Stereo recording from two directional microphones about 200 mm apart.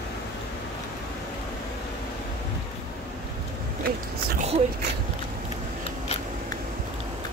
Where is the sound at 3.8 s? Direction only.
50° right (ahead or behind).